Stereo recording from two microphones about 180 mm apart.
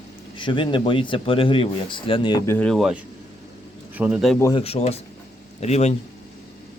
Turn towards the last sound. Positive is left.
turn(degrees=35)  # may be behind; listen again after turning